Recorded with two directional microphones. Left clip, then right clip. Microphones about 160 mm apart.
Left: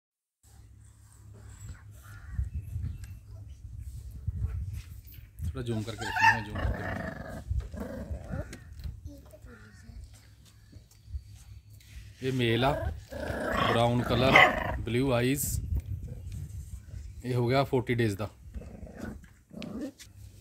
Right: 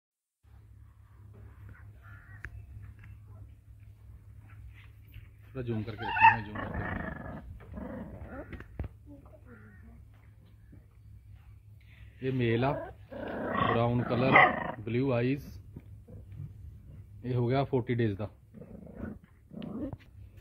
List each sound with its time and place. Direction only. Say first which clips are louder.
5.5 s speech: left 1 dB; 30° left (ahead or behind)
5.9 s speech: right 2 dB; 30° right (ahead or behind)
6.5 s dog: left 1 dB; 35° right (ahead or behind)
12.2 s speech: left 2 dB; 15° left (ahead or behind)
12.7 s dog: left 3 dB; 25° right (ahead or behind)
13.7 s speech: left 3 dB; 30° left (ahead or behind)
14.3 s speech: left 1 dB; 25° right (ahead or behind)
14.9 s speech: left 2 dB; 30° left (ahead or behind)
17.2 s speech: left 3 dB; 20° left (ahead or behind)
18.9 s dog: left 2 dB; 25° right (ahead or behind)